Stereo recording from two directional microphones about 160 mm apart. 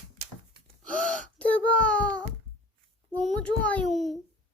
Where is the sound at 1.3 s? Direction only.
10° left (ahead or behind).